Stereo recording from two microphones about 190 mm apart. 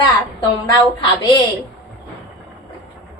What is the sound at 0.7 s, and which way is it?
Speech, 25° left (ahead or behind).